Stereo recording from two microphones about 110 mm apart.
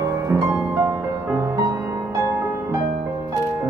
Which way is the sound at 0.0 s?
30° right (ahead or behind).